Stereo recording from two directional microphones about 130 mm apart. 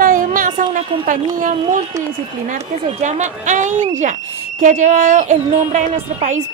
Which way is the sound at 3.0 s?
65° right (ahead or behind).